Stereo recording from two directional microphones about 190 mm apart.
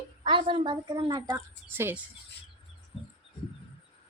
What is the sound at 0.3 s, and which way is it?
A woman's voice, 25° right (ahead or behind).